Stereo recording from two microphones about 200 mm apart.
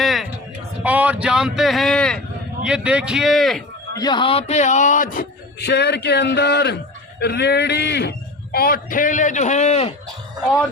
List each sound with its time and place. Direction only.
0.0 s a sound: centre (ahead or behind)
0.8 s speech: 5° right (ahead or behind)
3.9 s a man's voice: 20° left (ahead or behind); by 5.2 s 40° left (ahead or behind)
5.5 s a man's voice: 55° left (ahead or behind); by 9.9 s 35° left (ahead or behind)